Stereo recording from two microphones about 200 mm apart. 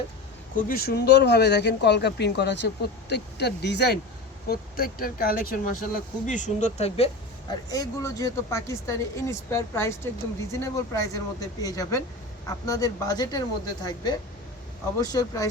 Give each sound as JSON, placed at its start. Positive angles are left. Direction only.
{"t": 0.5, "sound": "speech", "side_deg": 50}
{"t": 4.4, "sound": "speech", "side_deg": 45}
{"t": 7.7, "sound": "a woman's voice", "side_deg": 15}